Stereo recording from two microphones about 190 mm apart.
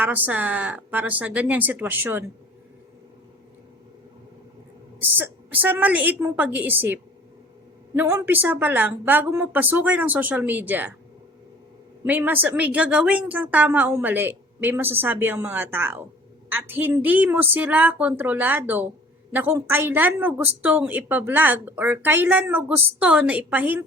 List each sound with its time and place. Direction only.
0.0 s speech: 10° right (ahead or behind)
4.9 s speech: 10° right (ahead or behind)
12.0 s speech: 10° right (ahead or behind)